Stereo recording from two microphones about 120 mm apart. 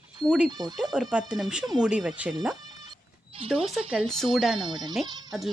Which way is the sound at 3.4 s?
50° right (ahead or behind).